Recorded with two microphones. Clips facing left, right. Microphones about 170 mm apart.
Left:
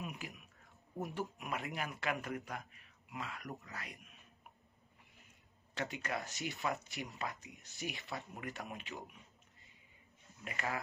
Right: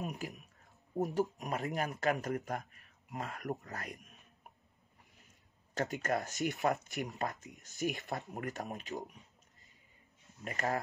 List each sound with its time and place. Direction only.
0.0 s a sound: 40° right (ahead or behind)
1.4 s speech: 40° right (ahead or behind)
5.8 s speech: 45° right (ahead or behind)
10.3 s speech: 40° right (ahead or behind)